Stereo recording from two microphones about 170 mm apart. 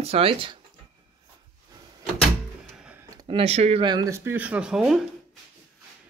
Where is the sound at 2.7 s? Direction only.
5° right (ahead or behind).